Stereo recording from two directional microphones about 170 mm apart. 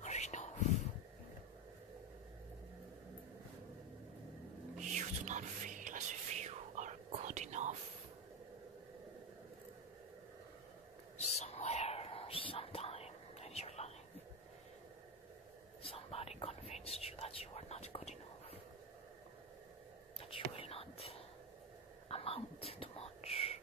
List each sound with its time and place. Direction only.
0.0 s whispering: 40° left (ahead or behind)
4.9 s whispering: 45° right (ahead or behind)
11.1 s bird: 40° left (ahead or behind)
15.8 s whispering: 35° left (ahead or behind)
20.2 s whispering: 35° left (ahead or behind)
22.1 s whispering: 35° left (ahead or behind)